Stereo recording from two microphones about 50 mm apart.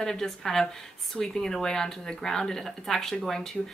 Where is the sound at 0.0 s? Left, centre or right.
Centre.